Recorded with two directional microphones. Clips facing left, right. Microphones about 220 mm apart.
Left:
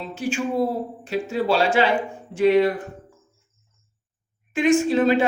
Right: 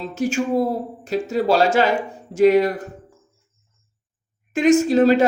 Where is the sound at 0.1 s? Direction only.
40° right (ahead or behind).